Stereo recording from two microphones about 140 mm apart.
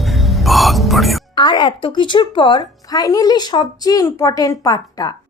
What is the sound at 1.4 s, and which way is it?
A woman's voice, 30° left (ahead or behind).